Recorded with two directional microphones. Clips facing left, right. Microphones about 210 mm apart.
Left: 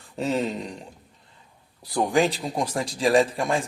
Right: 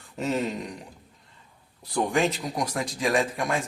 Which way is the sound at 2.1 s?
35° left (ahead or behind).